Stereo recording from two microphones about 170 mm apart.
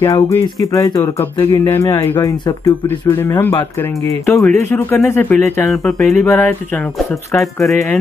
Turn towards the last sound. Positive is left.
turn(degrees=0)  # may be behind; listen again after turning